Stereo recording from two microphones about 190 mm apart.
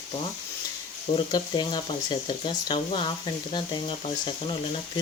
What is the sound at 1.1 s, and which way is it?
Speech, 25° left (ahead or behind).